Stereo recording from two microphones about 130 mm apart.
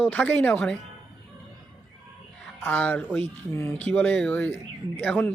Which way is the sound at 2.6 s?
10° left (ahead or behind).